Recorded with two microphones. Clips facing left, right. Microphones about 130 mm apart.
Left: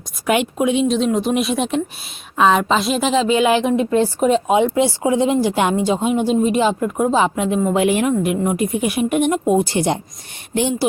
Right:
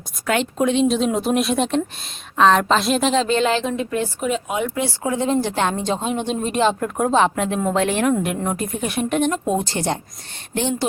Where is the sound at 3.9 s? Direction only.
35° left (ahead or behind).